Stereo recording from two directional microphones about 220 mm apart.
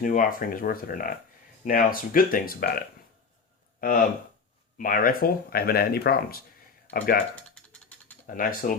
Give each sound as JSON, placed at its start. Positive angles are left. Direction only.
{"t": 0.0, "sound": "speech", "side_deg": 40}
{"t": 7.3, "sound": "mechanisms", "side_deg": 5}
{"t": 8.3, "sound": "speech", "side_deg": 40}